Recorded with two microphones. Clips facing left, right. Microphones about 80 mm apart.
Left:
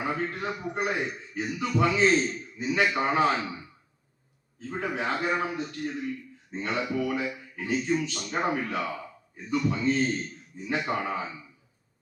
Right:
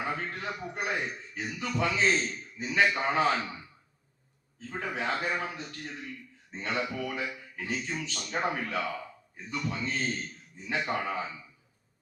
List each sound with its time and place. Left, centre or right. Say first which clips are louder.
0.0 s a man's voice: left 4 dB; left
4.8 s a man's voice: left 3 dB; left